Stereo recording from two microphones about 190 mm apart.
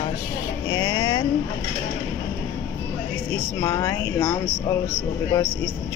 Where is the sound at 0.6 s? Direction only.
25° left (ahead or behind).